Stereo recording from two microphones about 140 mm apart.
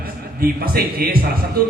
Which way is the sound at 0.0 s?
90° right.